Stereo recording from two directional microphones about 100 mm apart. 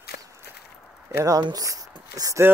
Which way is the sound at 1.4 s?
40° right (ahead or behind).